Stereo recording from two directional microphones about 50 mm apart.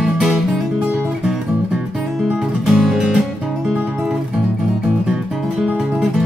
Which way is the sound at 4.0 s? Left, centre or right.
Centre.